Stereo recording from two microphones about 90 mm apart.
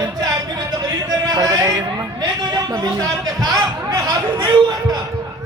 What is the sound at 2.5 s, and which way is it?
Speech, 45° right (ahead or behind).